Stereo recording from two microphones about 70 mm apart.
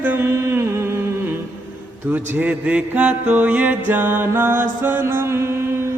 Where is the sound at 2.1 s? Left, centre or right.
Right.